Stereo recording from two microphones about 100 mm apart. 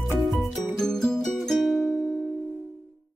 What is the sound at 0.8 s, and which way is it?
Music, 5° left (ahead or behind).